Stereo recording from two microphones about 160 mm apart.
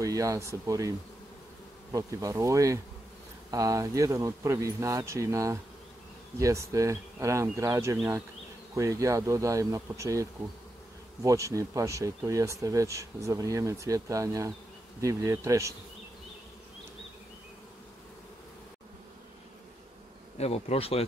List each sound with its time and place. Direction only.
0.0 s speech: 20° right (ahead or behind)
11.2 s speech: 20° right (ahead or behind)
20.3 s speech: 40° left (ahead or behind)